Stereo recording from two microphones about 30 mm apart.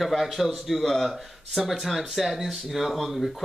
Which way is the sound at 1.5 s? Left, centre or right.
Centre.